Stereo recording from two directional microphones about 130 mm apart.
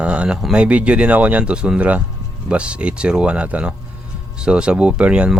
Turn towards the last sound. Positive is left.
turn(degrees=-10)  # may be behind; listen again after turning